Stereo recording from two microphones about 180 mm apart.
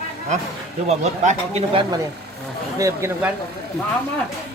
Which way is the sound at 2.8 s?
15° right (ahead or behind).